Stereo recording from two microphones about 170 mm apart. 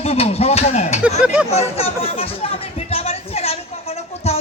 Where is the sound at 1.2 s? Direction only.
5° right (ahead or behind).